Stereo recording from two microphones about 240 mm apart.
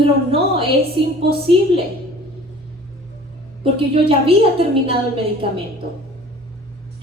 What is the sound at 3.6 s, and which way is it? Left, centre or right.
A woman's voice, right.